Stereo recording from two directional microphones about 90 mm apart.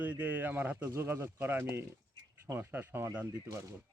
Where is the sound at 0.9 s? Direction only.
30° right (ahead or behind).